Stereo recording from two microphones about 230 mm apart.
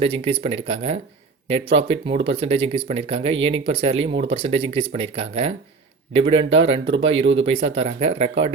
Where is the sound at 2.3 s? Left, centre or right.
Right.